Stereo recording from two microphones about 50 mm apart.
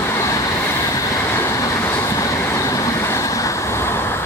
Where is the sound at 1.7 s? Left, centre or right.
Left.